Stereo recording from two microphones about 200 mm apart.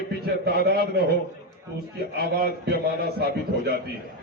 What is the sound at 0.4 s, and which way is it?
Speech, 50° right (ahead or behind).